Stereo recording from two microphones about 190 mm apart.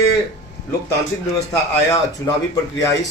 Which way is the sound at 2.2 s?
15° left (ahead or behind).